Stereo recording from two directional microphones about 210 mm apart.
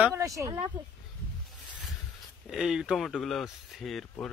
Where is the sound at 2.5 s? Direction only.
Centre (ahead or behind).